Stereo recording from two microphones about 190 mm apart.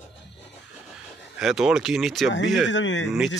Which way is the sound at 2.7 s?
75° left (ahead or behind).